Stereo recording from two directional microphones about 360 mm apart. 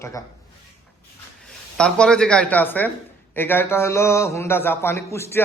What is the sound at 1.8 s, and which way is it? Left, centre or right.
A man's voice, centre.